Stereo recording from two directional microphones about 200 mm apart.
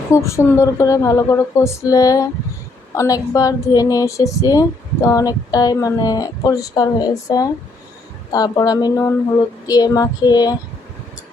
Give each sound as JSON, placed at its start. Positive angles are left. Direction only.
{"t": 0.1, "sound": "a woman's voice", "side_deg": 15}